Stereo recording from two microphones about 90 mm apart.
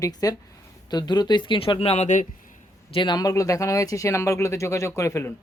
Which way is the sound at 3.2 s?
40° left (ahead or behind).